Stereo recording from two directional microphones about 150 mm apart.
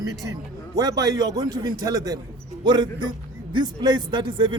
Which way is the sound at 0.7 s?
25° right (ahead or behind).